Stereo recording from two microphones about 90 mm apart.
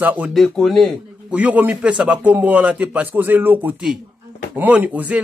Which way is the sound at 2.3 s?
15° right (ahead or behind).